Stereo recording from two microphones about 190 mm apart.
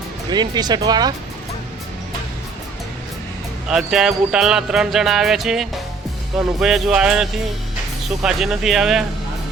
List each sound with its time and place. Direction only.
0.3 s speech: 20° right (ahead or behind)
3.7 s speech: 5° right (ahead or behind)